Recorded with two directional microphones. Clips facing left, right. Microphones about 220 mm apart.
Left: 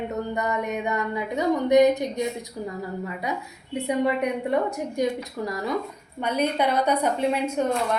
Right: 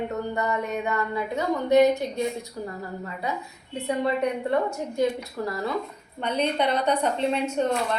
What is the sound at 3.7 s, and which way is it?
A woman's voice, 15° left (ahead or behind).